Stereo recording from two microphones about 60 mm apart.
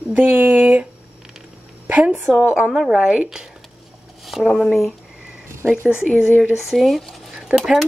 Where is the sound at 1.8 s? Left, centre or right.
Right.